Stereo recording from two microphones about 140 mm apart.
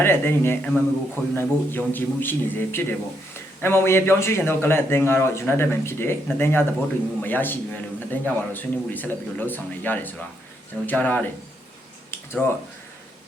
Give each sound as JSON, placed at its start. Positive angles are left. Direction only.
{"t": 0.0, "sound": "a man's voice", "side_deg": 15}